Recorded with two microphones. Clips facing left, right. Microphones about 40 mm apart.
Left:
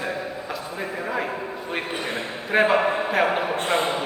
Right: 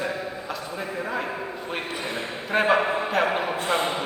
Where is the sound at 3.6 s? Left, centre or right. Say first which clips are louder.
Left 2 dB; left.